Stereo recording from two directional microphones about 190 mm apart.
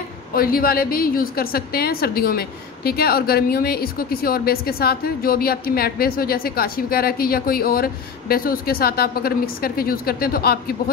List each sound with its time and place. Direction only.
0.3 s a woman's voice: 50° left (ahead or behind)